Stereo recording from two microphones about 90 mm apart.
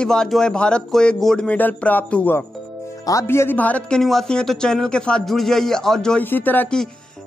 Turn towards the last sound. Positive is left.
turn(degrees=20)  # may be behind; listen again after turning